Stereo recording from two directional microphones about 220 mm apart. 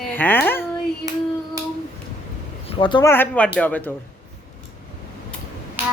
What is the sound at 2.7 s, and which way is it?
Speech, 20° left (ahead or behind).